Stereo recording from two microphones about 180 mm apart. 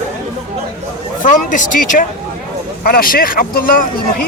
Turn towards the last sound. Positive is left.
turn(degrees=50)  # may be behind; listen again after turning